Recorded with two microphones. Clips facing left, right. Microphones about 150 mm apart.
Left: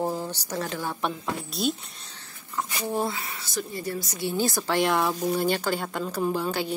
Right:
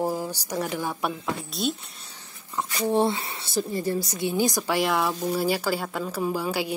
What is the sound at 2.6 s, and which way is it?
Speech, 25° right (ahead or behind).